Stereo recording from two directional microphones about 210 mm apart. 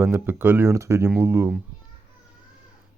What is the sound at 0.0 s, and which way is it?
Speech, 10° right (ahead or behind).